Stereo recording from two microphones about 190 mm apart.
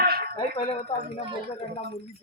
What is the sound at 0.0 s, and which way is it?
Cutlery, 55° right (ahead or behind).